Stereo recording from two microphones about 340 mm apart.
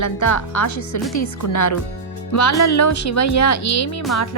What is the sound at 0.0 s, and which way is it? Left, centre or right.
Speech, left.